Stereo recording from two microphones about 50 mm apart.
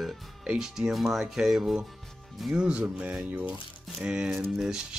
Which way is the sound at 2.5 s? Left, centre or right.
Right.